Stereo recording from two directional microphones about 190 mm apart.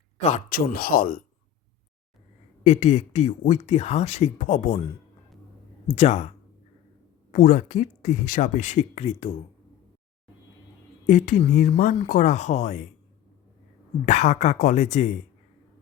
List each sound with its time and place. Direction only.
0.2 s speech: 40° left (ahead or behind)
2.6 s speech: 35° left (ahead or behind)
5.9 s speech: 35° left (ahead or behind)
11.0 s speech: 40° left (ahead or behind)
14.0 s speech: 40° left (ahead or behind)